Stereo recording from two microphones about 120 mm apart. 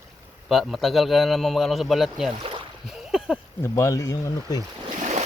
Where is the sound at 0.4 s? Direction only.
Centre (ahead or behind).